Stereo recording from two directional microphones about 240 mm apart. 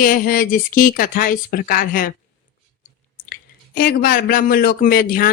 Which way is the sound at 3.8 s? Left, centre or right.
Left.